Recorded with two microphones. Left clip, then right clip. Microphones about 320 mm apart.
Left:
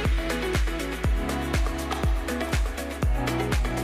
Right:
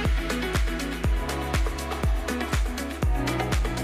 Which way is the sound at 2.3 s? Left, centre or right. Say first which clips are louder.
Even; centre.